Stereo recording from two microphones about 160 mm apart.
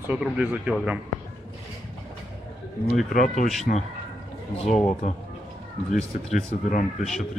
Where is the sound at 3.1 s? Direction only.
50° left (ahead or behind).